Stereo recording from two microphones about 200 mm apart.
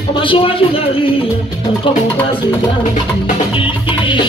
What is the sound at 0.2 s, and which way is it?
Music, 25° left (ahead or behind).